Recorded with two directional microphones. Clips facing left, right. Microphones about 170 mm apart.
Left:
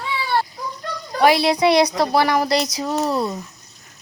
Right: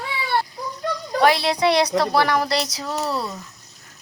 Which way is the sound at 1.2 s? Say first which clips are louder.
Left 3 dB; 10° left (ahead or behind).